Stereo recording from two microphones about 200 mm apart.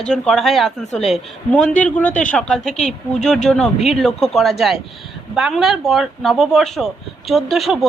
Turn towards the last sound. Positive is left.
turn(degrees=0)  # may be behind; listen again after turning